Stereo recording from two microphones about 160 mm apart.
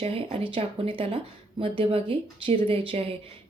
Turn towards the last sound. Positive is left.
turn(degrees=-35)  # may be behind; listen again after turning